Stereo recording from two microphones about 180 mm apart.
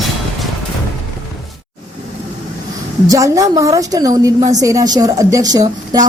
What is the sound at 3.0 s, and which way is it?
A woman's voice, 20° right (ahead or behind).